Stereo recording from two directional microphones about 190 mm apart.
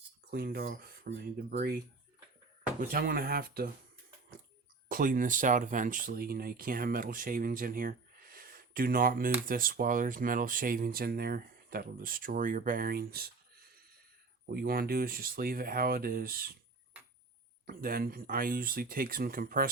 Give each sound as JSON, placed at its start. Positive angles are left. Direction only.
{"t": 0.3, "sound": "speech", "side_deg": -55}
{"t": 2.8, "sound": "speech", "side_deg": -50}
{"t": 4.9, "sound": "speech", "side_deg": -45}
{"t": 14.5, "sound": "speech", "side_deg": -50}
{"t": 17.7, "sound": "speech", "side_deg": -50}